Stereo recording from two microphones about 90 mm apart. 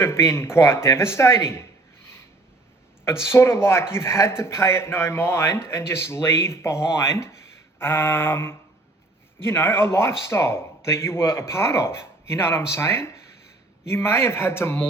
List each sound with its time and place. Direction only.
0.0 s a man's voice: 30° left (ahead or behind)
3.0 s a man's voice: 25° left (ahead or behind)